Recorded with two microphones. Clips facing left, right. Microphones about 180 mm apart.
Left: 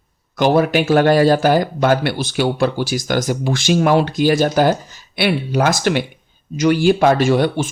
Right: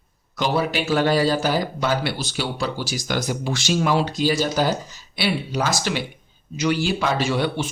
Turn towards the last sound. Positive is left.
turn(degrees=45)  # may be behind; listen again after turning